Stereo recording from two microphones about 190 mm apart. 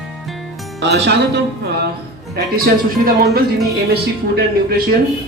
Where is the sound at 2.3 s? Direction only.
55° right (ahead or behind).